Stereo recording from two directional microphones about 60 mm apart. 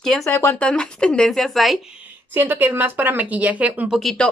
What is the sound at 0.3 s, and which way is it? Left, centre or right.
Speech, left.